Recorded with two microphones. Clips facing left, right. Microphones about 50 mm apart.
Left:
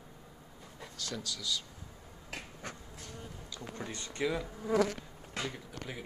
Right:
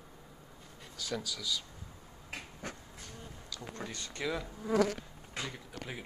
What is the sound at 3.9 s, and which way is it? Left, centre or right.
Speech, left.